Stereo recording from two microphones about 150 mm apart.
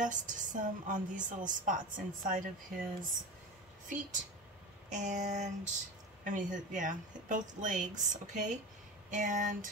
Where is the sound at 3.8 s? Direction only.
60° right (ahead or behind).